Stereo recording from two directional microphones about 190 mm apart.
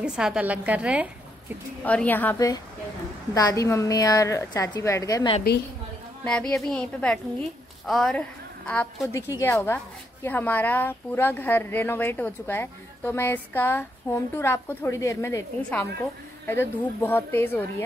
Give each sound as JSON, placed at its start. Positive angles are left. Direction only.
{"t": 0.0, "sound": "a woman's voice", "side_deg": -5}
{"t": 1.9, "sound": "a woman's voice", "side_deg": 10}
{"t": 6.2, "sound": "a woman's voice", "side_deg": 5}
{"t": 9.1, "sound": "a woman's voice", "side_deg": 15}